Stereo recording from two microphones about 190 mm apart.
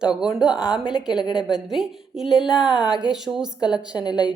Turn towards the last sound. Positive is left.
turn(degrees=20)  # may be behind; listen again after turning